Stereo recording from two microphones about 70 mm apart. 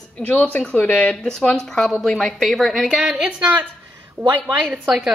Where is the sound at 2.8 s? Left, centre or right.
Centre.